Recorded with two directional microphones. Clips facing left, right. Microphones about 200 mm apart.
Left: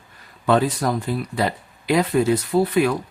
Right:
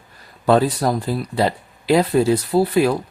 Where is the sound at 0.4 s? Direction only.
35° right (ahead or behind).